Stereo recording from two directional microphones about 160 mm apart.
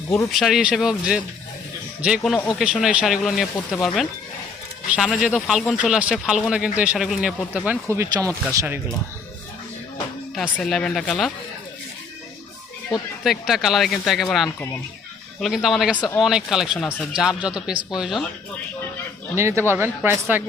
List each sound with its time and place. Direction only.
0.3 s speech: centre (ahead or behind)
4.9 s speech: centre (ahead or behind)
10.3 s speech: centre (ahead or behind)
13.5 s speech: centre (ahead or behind)
19.4 s speech: 15° right (ahead or behind)